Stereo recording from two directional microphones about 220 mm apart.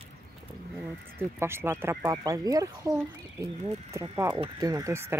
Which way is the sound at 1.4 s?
10° right (ahead or behind).